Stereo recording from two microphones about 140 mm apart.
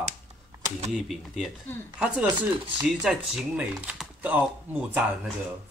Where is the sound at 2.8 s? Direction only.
10° right (ahead or behind).